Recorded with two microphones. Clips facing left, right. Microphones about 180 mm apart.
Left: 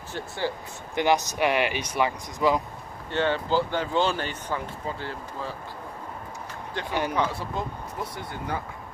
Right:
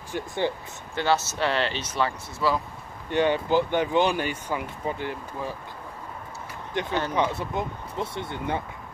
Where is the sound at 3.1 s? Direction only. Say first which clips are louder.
Right 3 dB; 15° right (ahead or behind).